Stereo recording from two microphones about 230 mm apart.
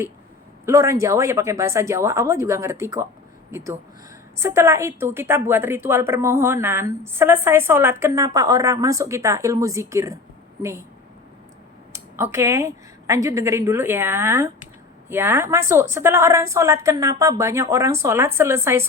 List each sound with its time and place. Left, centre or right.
0.6 s a woman's voice: centre
11.9 s a woman's voice: centre